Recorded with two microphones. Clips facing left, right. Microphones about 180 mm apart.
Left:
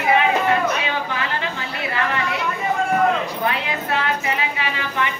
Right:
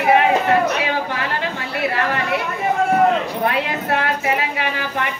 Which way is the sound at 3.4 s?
60° right (ahead or behind).